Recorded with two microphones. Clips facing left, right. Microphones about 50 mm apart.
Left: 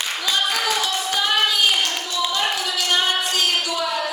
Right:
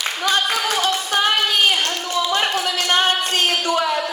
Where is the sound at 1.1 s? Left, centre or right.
Right.